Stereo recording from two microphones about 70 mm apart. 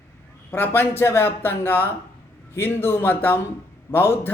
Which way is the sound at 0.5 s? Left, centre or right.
Left.